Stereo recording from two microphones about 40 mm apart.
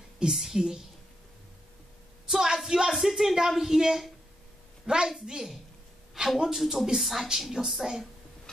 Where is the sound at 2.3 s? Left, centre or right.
Centre.